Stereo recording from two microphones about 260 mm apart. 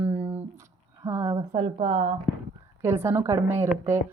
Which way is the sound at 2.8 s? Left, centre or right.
Centre.